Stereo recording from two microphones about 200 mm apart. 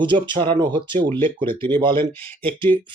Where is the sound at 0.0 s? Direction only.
25° right (ahead or behind).